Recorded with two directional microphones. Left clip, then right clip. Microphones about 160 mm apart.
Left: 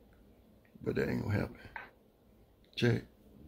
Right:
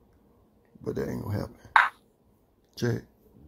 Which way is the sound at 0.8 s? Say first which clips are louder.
Right 2 dB; 10° right (ahead or behind).